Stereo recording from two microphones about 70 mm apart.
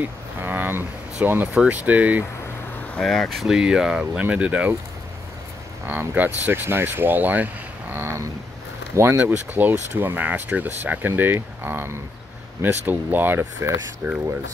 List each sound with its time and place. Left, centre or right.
0.4 s a sound: right
1.2 s speech: right
3.0 s speech: centre
3.5 s speech: centre
5.9 s speech: right
7.9 s a sound: right
8.9 s speech: right
9.2 s speech: right